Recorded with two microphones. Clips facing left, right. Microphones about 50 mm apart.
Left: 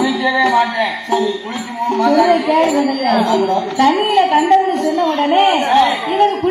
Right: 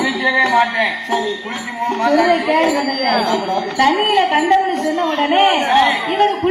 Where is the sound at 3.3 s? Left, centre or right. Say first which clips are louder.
Left 4 dB; left.